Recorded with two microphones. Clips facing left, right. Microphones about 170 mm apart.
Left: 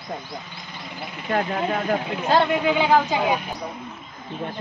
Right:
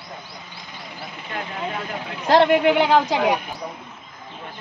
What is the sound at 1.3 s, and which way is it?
Speech, 50° left (ahead or behind).